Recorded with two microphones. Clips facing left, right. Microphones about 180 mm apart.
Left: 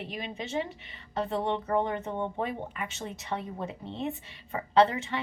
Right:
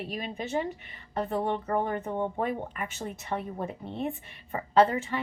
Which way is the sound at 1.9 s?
45° right (ahead or behind).